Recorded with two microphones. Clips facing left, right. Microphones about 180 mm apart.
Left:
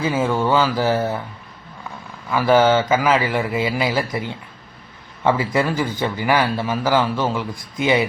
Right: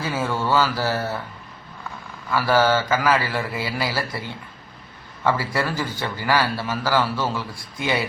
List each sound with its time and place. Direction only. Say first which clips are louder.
0.0 s a man's voice: left 5 dB; 15° left (ahead or behind)
2.3 s a man's voice: left 4 dB; 20° left (ahead or behind)